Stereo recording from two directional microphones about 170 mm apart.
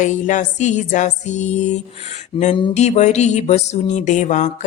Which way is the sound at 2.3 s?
30° left (ahead or behind).